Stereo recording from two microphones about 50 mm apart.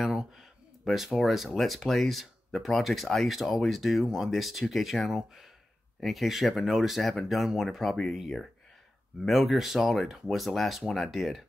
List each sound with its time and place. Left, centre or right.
0.0 s a sound: centre
0.8 s speech: centre
9.2 s speech: centre